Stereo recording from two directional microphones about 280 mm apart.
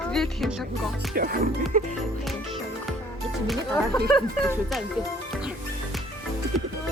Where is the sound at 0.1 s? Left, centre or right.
Centre.